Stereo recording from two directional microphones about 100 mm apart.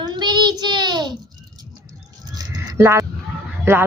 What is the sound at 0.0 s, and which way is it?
Child singing, 50° right (ahead or behind).